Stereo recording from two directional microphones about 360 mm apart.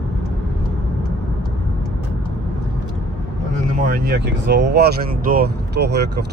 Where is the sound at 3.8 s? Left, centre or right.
Right.